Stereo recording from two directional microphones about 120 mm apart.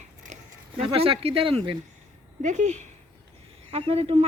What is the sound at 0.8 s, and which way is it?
Speech, 50° right (ahead or behind).